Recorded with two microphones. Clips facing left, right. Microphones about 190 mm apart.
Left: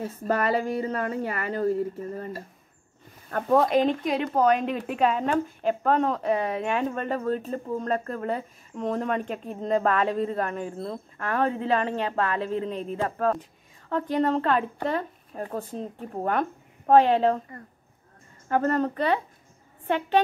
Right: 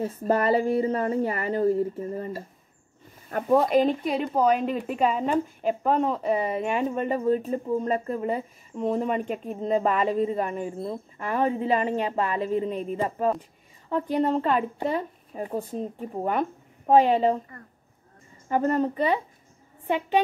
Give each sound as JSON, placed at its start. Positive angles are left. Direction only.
{"t": 0.3, "sound": "a woman's voice", "side_deg": -25}
{"t": 18.5, "sound": "speech", "side_deg": -10}